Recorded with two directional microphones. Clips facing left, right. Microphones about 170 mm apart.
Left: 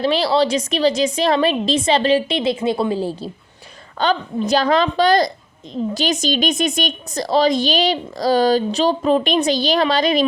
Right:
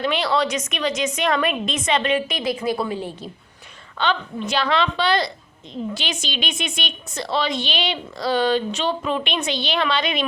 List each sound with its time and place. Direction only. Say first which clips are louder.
0.0 s a woman's voice: left 5 dB; 35° left (ahead or behind)